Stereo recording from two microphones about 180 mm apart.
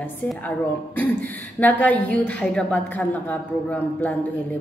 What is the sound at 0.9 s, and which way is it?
A woman's voice, 10° left (ahead or behind).